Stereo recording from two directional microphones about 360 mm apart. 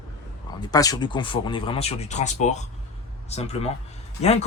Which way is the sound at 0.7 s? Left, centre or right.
Centre.